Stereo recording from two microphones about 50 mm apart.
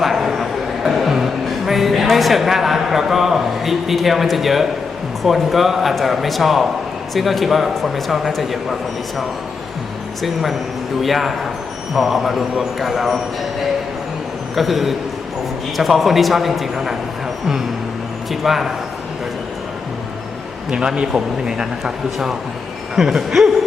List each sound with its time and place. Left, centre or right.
0.0 s a sound: centre
5.2 s speech: centre
11.0 s speech: centre
14.5 s speech: centre
18.3 s speech: centre
20.7 s speech: centre